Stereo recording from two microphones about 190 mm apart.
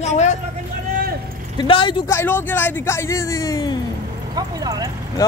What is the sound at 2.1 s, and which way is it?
Speech, 10° left (ahead or behind).